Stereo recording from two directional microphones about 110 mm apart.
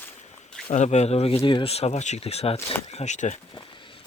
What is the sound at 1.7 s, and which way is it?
Speech, 80° left.